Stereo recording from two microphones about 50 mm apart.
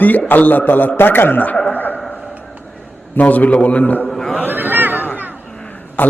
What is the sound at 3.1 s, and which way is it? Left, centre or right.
Speech, left.